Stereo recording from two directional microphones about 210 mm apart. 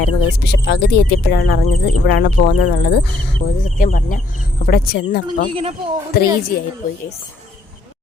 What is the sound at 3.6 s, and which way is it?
Speech, 40° left (ahead or behind).